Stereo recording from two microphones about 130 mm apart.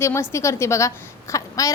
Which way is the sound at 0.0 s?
20° left (ahead or behind).